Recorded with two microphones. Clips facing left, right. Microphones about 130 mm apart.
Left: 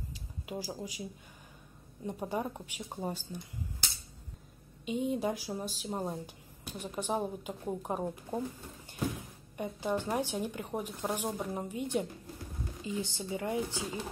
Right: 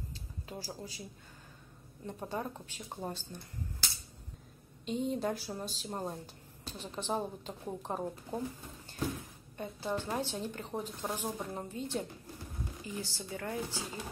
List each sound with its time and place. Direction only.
0.1 s a sound: 15° left (ahead or behind)
2.0 s speech: 15° left (ahead or behind)
4.8 s speech: 10° left (ahead or behind)